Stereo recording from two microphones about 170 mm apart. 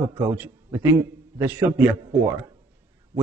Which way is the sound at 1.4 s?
10° right (ahead or behind).